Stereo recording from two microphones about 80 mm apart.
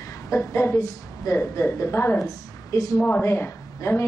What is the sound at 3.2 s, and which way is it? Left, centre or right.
Speech, left.